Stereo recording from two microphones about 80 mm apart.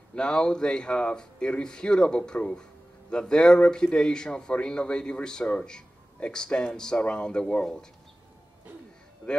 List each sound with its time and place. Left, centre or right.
0.1 s a man's voice: centre